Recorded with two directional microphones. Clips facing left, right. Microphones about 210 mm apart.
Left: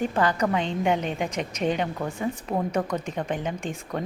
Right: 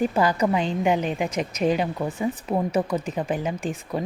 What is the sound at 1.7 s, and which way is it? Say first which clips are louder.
Speech: right 3 dB; 5° right (ahead or behind).